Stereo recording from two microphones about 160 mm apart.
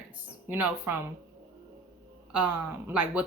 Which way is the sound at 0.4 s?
15° right (ahead or behind).